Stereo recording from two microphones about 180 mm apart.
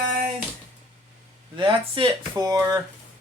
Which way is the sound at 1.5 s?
25° right (ahead or behind).